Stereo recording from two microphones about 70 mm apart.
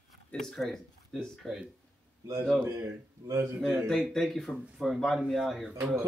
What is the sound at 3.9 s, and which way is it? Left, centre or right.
Speech, centre.